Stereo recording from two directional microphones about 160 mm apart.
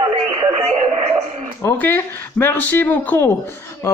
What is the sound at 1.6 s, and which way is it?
A man's voice, 10° left (ahead or behind).